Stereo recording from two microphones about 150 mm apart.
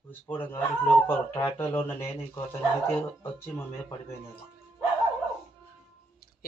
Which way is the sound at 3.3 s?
15° left (ahead or behind).